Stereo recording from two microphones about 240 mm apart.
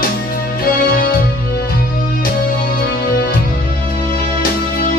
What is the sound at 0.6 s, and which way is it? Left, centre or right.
Music, left.